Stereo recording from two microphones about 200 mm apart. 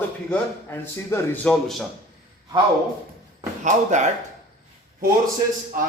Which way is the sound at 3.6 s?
35° right (ahead or behind).